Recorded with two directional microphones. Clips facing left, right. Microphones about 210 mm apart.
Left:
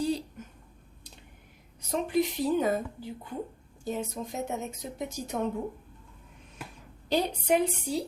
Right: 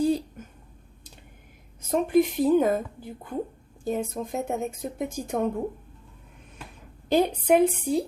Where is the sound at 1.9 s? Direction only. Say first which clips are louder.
Right 6 dB; 50° right (ahead or behind).